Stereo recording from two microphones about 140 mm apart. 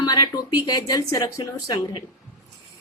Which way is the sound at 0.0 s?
30° left (ahead or behind).